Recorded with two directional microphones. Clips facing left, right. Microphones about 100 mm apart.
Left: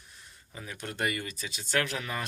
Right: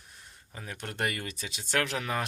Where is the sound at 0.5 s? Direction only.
50° right (ahead or behind); by 2.2 s 75° right (ahead or behind).